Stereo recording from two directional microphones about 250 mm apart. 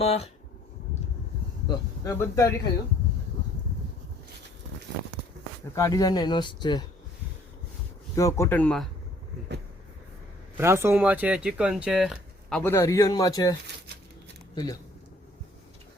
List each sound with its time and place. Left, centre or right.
0.0 s speech: left
1.6 s speech: centre
5.7 s speech: centre
8.1 s speech: centre
10.6 s speech: centre